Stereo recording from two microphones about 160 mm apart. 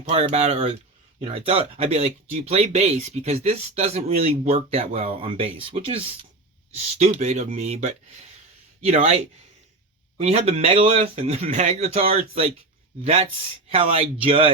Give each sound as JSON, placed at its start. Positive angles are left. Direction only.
{"t": 0.0, "sound": "speech", "side_deg": -40}